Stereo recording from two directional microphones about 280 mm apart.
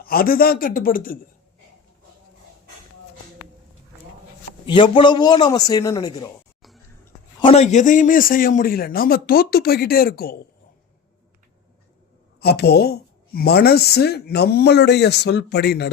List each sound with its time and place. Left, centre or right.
0.0 s a woman's voice: left
4.6 s a man's voice: centre
7.4 s a woman's voice: left
12.4 s a woman's voice: left